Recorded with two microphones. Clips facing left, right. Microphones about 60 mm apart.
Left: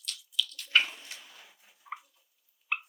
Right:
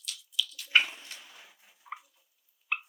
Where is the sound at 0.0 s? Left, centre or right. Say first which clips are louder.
Even; centre.